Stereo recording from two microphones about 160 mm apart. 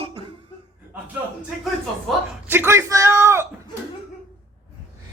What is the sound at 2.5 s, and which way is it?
Speech, 15° right (ahead or behind).